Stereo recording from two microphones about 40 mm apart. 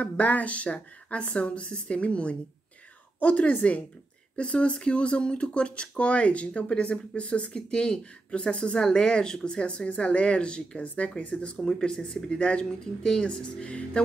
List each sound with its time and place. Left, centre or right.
0.0 s speech: left
4.4 s speech: left
11.6 s speech: centre